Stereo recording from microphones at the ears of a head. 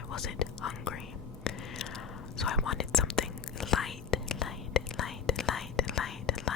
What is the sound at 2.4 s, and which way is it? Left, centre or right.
Whispering, left.